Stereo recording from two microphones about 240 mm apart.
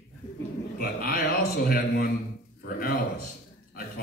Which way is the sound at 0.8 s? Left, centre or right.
Left.